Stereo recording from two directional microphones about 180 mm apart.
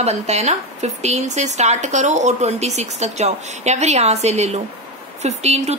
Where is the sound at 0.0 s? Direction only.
40° right (ahead or behind).